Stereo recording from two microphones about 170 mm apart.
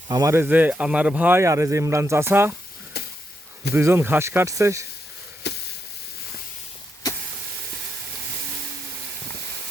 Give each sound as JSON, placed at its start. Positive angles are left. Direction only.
{"t": 0.1, "sound": "speech", "side_deg": -20}
{"t": 2.9, "sound": "sizzle", "side_deg": 70}
{"t": 3.8, "sound": "speech", "side_deg": -15}
{"t": 5.5, "sound": "a sound", "side_deg": 90}